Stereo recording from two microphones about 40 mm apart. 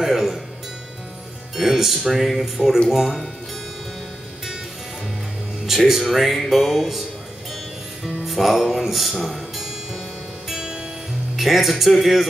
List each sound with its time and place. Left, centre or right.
0.0 s music: centre
1.6 s speech: centre
5.7 s speech: centre
10.5 s music: centre
11.3 s speech: centre